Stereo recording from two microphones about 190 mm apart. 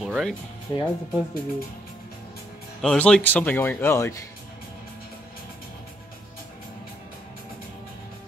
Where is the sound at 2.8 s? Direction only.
5° left (ahead or behind).